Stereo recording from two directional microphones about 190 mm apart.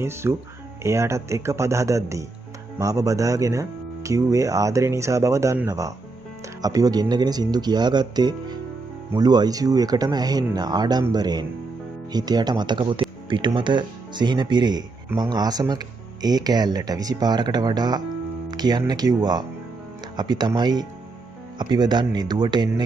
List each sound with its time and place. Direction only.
0.0 s speech: 15° right (ahead or behind)